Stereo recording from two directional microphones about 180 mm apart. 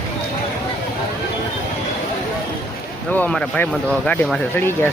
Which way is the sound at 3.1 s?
5° left (ahead or behind).